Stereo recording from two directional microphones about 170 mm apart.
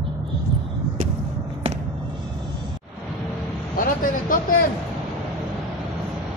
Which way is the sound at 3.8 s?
55° left (ahead or behind).